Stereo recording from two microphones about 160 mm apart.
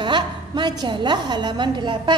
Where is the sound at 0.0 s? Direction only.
30° right (ahead or behind).